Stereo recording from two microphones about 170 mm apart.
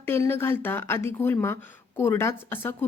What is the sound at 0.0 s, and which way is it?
A woman's voice, 15° left (ahead or behind).